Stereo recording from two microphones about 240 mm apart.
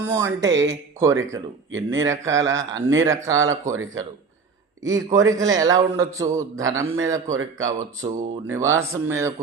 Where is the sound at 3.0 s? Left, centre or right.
Centre.